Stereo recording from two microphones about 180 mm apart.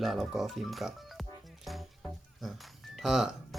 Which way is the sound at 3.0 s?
5° right (ahead or behind).